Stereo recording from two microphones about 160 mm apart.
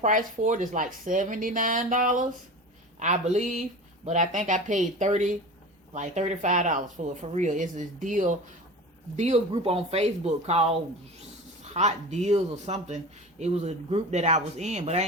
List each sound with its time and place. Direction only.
0.0 s speech: 55° right (ahead or behind)
3.3 s speech: 50° right (ahead or behind)